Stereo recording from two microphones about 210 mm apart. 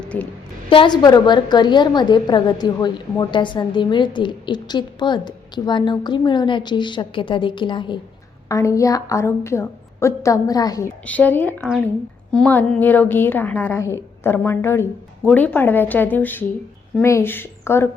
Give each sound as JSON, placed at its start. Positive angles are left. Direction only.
{"t": 0.0, "sound": "a sound", "side_deg": 5}
{"t": 0.7, "sound": "a woman's voice", "side_deg": 20}
{"t": 11.0, "sound": "a woman's voice", "side_deg": 5}